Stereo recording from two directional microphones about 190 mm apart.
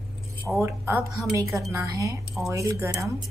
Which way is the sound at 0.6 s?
15° right (ahead or behind).